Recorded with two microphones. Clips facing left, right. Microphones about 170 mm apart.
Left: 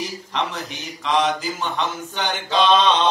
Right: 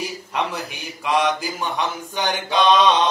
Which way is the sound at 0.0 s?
10° right (ahead or behind).